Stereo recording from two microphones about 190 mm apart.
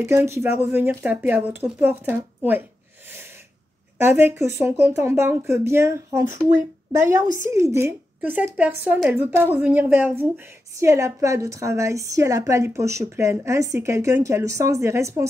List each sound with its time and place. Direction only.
0.0 s a woman's voice: 15° right (ahead or behind)
4.0 s a woman's voice: 10° right (ahead or behind)